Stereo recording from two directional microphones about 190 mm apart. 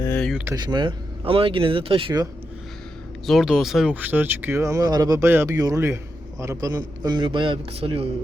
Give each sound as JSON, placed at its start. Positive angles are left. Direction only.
{"t": 0.0, "sound": "a sound", "side_deg": 5}
{"t": 0.4, "sound": "speech", "side_deg": -20}
{"t": 3.2, "sound": "speech", "side_deg": 0}